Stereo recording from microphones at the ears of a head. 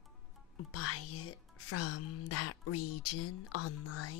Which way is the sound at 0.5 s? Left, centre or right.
Left.